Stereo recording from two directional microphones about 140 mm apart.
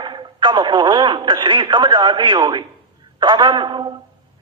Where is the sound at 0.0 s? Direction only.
35° right (ahead or behind).